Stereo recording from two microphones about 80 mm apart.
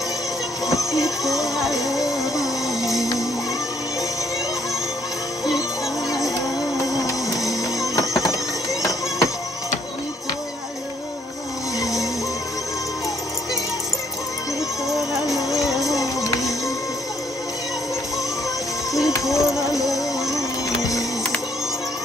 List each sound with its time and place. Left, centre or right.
0.7 s music: left
1.6 s music: centre
6.8 s music: left
15.5 s music: centre
19.3 s music: left